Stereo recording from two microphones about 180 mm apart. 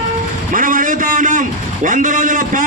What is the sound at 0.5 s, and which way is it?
A man's voice, 50° right (ahead or behind).